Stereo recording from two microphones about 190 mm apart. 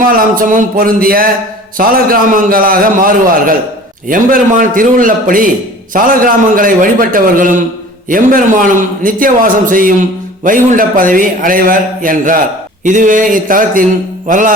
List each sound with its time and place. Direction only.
0.3 s a man's voice: 45° right (ahead or behind)